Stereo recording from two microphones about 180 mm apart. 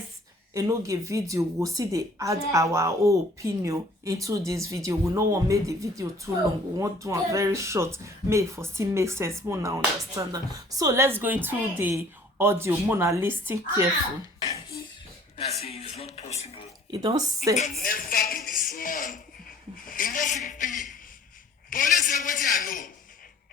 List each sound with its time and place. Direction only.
0.5 s a woman's voice: 20° right (ahead or behind)
15.6 s speech: 35° left (ahead or behind)
16.9 s speech: 25° right (ahead or behind)
17.7 s a man's voice: 50° left (ahead or behind)